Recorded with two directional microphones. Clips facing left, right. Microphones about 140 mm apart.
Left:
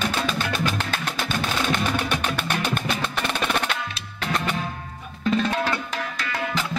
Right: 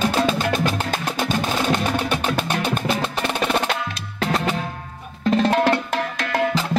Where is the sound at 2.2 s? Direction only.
40° right (ahead or behind).